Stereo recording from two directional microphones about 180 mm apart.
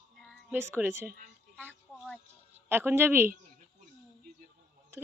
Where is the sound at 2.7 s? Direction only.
10° right (ahead or behind).